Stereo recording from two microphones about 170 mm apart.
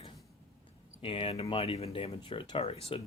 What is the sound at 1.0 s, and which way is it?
Speech, 35° left (ahead or behind).